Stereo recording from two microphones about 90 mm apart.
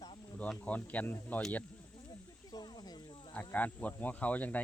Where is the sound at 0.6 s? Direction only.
15° left (ahead or behind).